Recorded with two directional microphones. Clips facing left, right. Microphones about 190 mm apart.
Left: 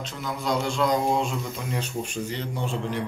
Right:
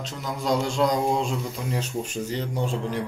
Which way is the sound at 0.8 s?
30° right (ahead or behind).